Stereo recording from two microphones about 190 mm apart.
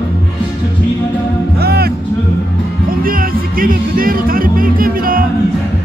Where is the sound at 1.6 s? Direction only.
55° right (ahead or behind).